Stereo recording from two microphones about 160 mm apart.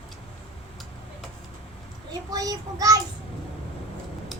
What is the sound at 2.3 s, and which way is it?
Speech, 20° right (ahead or behind).